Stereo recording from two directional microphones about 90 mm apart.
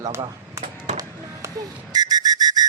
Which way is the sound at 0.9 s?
40° right (ahead or behind).